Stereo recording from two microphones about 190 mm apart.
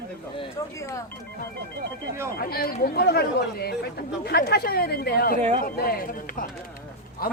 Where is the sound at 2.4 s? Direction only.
55° left (ahead or behind).